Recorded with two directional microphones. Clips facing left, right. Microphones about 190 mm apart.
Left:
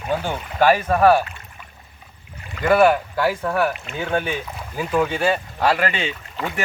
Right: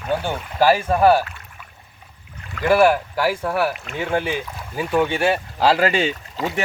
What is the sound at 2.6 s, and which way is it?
Speech, 5° right (ahead or behind).